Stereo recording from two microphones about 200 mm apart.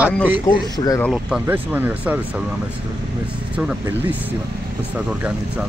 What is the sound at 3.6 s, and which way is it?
Speech, 5° right (ahead or behind).